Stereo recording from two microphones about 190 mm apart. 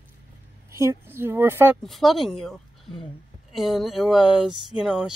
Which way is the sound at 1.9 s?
Centre (ahead or behind).